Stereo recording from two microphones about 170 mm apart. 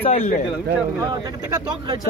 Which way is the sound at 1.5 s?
25° right (ahead or behind).